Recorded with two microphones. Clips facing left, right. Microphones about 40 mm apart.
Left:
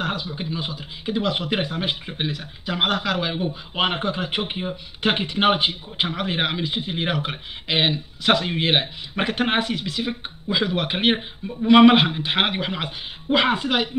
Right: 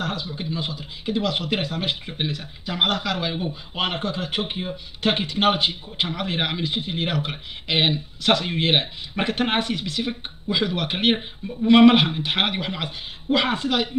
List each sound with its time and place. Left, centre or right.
0.0 s a man's voice: left
3.7 s a man's voice: left